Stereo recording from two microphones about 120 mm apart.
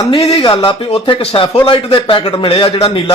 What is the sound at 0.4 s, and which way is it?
A man's voice, 45° left (ahead or behind).